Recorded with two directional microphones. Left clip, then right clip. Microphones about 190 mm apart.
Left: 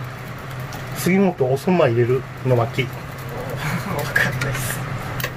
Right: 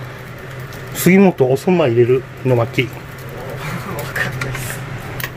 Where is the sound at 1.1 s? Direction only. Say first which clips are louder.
Right 6 dB; 45° right (ahead or behind).